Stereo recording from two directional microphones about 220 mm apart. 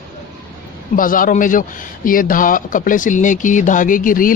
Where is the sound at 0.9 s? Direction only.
40° left (ahead or behind).